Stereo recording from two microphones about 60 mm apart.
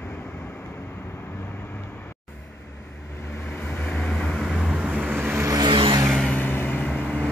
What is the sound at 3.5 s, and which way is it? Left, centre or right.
Vehicle, left.